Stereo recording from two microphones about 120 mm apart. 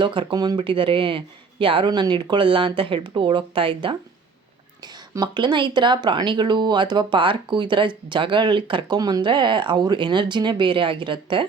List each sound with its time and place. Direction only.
0.0 s speech: 40° right (ahead or behind)
4.8 s speech: 35° right (ahead or behind)
9.0 s speech: 35° right (ahead or behind)